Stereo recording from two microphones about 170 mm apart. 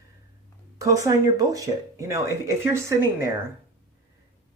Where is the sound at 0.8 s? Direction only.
20° right (ahead or behind).